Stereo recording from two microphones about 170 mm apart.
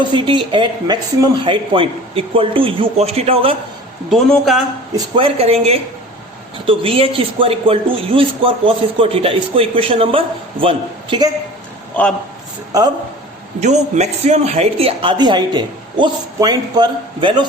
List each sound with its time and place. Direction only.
0.0 s speech: 30° right (ahead or behind)
4.1 s a man's voice: centre (ahead or behind)
4.9 s speech: 30° right (ahead or behind)
13.6 s speech: 45° right (ahead or behind); by 17.4 s 25° right (ahead or behind)